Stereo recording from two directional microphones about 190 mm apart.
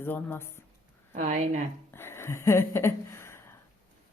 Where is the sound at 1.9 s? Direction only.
10° left (ahead or behind).